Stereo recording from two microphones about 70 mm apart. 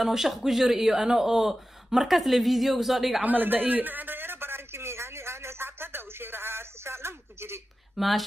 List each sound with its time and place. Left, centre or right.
0.0 s speech: centre
3.2 s a sound: right
7.9 s speech: centre